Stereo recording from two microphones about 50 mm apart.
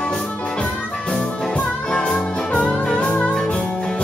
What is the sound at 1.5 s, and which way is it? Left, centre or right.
Music, centre.